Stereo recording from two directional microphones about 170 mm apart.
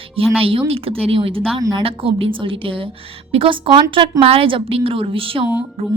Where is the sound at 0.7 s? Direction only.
35° right (ahead or behind).